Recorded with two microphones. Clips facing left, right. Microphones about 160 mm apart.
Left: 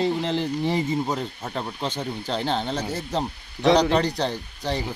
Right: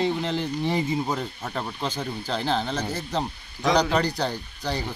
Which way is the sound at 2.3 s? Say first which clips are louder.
Even; 30° left (ahead or behind).